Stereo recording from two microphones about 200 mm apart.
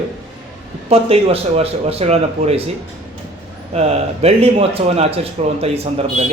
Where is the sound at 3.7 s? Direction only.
30° right (ahead or behind).